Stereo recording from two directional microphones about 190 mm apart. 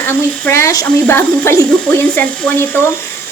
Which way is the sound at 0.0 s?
10° left (ahead or behind).